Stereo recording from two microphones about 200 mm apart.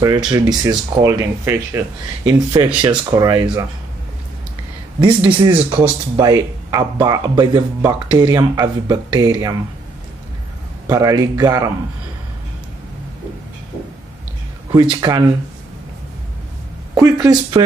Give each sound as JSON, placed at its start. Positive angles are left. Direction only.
{"t": 0.3, "sound": "speech", "side_deg": -20}
{"t": 5.4, "sound": "speech", "side_deg": -25}
{"t": 10.9, "sound": "speech", "side_deg": -15}
{"t": 14.7, "sound": "speech", "side_deg": -20}
{"t": 16.9, "sound": "speech", "side_deg": -15}